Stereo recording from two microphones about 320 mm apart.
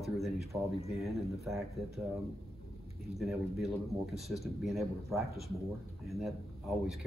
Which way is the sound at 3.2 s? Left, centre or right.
Centre.